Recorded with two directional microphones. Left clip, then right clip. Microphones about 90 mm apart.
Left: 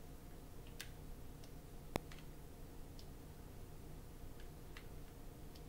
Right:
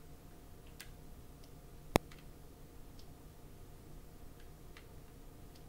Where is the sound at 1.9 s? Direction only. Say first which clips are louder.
Right 12 dB; centre (ahead or behind).